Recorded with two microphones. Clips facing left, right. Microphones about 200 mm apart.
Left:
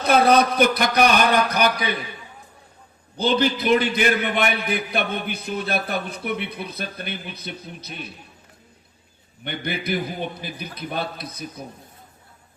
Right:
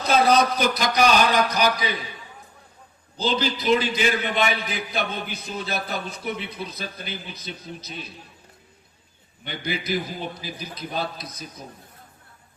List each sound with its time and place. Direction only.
0.0 s a man's voice: 60° left (ahead or behind)
3.2 s a man's voice: 60° left (ahead or behind)
9.4 s a man's voice: 60° left (ahead or behind)